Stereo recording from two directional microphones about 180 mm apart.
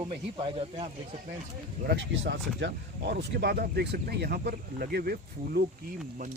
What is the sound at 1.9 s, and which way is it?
Speech, 80° right.